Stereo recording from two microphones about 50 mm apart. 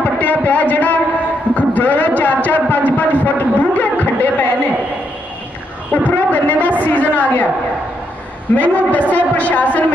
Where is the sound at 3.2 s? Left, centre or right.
Left.